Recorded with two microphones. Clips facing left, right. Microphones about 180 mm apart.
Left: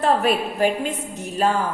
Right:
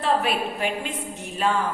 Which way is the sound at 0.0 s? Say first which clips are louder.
Left 4 dB; 45° left (ahead or behind).